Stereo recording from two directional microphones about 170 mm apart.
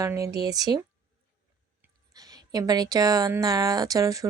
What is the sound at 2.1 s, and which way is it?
Speech, 20° right (ahead or behind).